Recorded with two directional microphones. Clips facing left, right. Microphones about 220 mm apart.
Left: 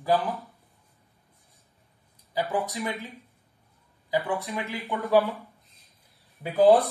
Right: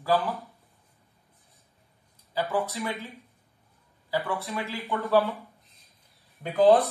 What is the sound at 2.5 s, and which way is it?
Speech, 15° left (ahead or behind).